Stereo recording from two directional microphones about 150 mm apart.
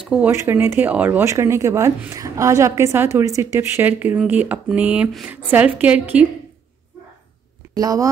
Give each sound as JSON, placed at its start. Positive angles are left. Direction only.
{"t": 0.1, "sound": "speech", "side_deg": -10}
{"t": 7.7, "sound": "speech", "side_deg": -25}